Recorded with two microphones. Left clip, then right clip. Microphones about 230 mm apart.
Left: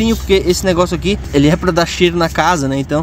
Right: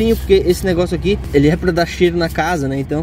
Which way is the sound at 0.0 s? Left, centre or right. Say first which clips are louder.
Right 1 dB; centre.